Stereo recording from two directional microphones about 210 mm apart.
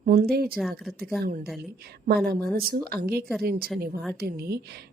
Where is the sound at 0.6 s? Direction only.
Centre (ahead or behind).